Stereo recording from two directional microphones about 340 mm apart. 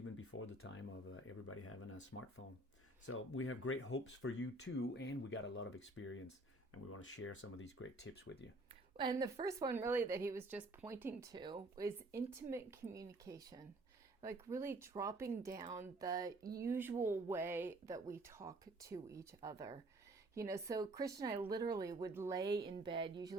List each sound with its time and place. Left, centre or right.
0.0 s speech: left
3.1 s speech: left
9.0 s speech: centre